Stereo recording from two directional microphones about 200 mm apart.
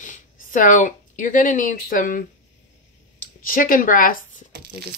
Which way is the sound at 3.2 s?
45° left (ahead or behind).